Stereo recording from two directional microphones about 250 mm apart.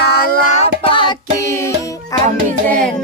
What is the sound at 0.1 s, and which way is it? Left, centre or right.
Child singing, left.